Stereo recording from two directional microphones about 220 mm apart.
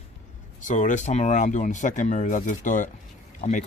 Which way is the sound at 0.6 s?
35° left (ahead or behind).